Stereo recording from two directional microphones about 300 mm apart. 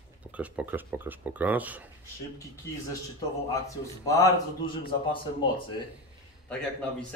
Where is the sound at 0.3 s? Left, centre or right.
Centre.